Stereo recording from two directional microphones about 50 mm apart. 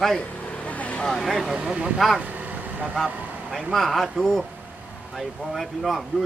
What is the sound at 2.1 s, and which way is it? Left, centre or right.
Vehicle, right.